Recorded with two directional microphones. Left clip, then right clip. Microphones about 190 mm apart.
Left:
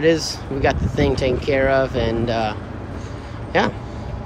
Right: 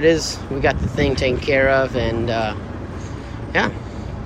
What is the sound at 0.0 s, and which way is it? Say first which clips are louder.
Speech: right 1 dB; 10° left (ahead or behind).